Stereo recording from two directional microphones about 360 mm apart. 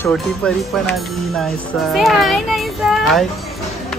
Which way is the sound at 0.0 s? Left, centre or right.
Centre.